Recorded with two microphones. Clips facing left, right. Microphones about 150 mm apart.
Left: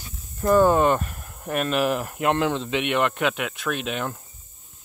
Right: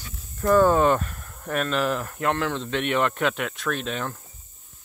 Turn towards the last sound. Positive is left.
turn(degrees=10)  # may be behind; listen again after turning